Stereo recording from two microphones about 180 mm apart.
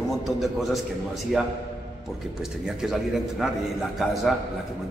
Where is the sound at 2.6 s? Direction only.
5° right (ahead or behind).